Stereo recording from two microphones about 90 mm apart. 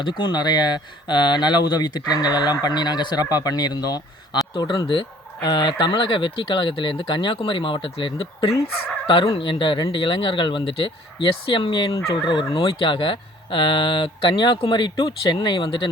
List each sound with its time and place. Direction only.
0.0 s speech: 60° left (ahead or behind)